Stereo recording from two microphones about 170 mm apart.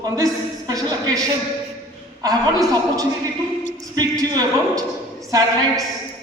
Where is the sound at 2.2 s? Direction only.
20° right (ahead or behind).